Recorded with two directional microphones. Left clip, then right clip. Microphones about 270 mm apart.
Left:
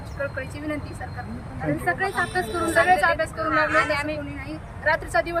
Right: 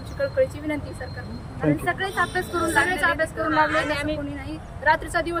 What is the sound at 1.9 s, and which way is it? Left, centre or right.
Speech, centre.